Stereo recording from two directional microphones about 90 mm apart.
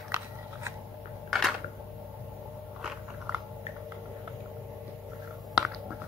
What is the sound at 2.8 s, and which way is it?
Biting, 10° right (ahead or behind).